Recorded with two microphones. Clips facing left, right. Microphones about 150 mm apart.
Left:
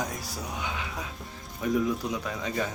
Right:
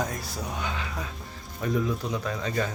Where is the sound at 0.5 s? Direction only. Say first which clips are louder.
Right 1 dB; 10° left (ahead or behind).